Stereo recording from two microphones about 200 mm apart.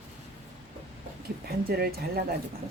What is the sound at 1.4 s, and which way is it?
Speech, 50° right (ahead or behind).